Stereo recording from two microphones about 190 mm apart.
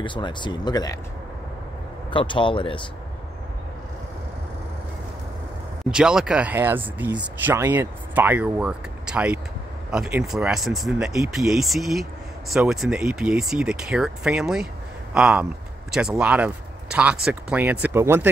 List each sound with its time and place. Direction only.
0.0 s speech: 25° left (ahead or behind)
2.0 s speech: 25° left (ahead or behind)
5.9 s speech: 5° right (ahead or behind)